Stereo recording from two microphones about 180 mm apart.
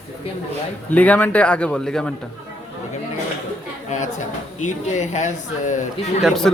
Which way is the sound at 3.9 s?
40° left (ahead or behind).